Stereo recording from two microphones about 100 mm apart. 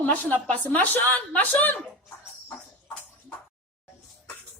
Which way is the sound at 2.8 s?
15° left (ahead or behind).